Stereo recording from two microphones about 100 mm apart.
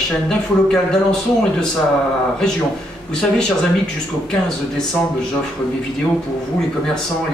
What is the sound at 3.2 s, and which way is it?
A man's voice, 10° left (ahead or behind).